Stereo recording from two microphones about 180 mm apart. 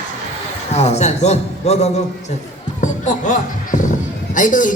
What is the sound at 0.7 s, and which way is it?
A man's voice, 40° left (ahead or behind).